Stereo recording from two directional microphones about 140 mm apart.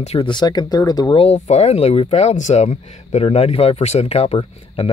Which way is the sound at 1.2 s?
50° left (ahead or behind).